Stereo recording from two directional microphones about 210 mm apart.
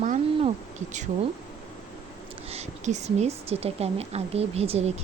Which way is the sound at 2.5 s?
30° right (ahead or behind).